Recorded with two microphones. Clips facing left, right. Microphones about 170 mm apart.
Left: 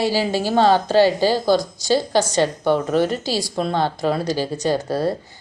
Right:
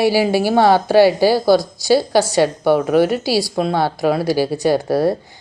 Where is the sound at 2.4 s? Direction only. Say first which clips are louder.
Right 4 dB; 10° right (ahead or behind).